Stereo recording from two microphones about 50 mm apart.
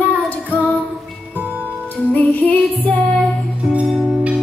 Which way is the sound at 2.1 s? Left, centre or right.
Left.